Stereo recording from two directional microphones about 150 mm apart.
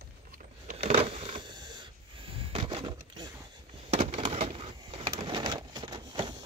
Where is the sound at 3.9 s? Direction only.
45° right (ahead or behind); by 6.4 s 30° right (ahead or behind).